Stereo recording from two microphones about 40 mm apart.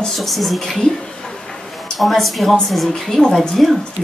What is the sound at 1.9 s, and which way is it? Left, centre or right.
A woman's voice, centre.